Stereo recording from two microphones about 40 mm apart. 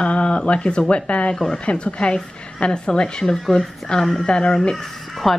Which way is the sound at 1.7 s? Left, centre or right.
Left.